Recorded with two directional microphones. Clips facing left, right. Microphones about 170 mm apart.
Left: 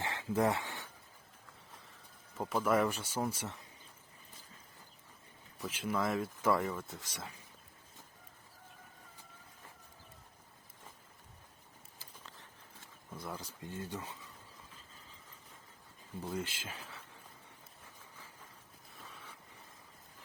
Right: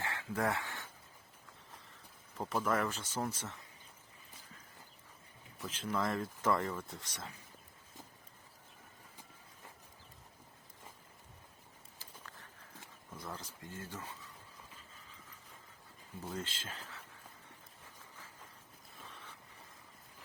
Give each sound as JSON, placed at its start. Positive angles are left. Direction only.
{"t": 0.0, "sound": "a sound", "side_deg": 20}
{"t": 2.4, "sound": "speech", "side_deg": 10}
{"t": 5.5, "sound": "speech", "side_deg": 10}
{"t": 13.1, "sound": "speech", "side_deg": 10}
{"t": 16.2, "sound": "speech", "side_deg": 10}
{"t": 19.0, "sound": "vehicle", "side_deg": 5}